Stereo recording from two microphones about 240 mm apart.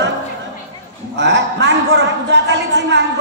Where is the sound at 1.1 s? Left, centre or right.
Right.